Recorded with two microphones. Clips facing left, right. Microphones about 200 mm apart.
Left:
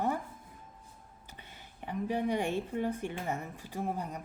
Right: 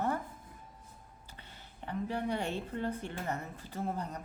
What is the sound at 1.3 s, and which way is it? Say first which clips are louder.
Speech: left 2 dB; 15° left (ahead or behind).